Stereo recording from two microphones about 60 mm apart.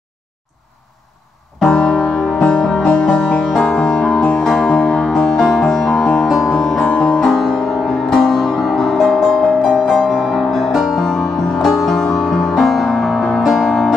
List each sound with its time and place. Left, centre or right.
1.7 s music: centre
3.6 s music: centre
3.9 s music: centre
7.2 s music: centre